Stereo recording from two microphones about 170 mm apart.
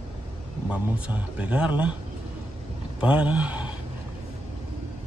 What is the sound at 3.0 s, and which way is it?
Speech, 5° right (ahead or behind).